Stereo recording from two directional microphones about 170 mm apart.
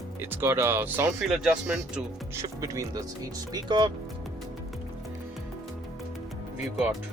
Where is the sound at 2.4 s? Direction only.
20° right (ahead or behind).